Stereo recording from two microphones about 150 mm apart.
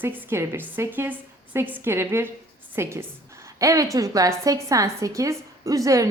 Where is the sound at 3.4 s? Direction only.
20° right (ahead or behind).